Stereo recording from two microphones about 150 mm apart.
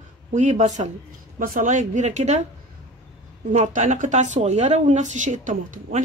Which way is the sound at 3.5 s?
55° right (ahead or behind).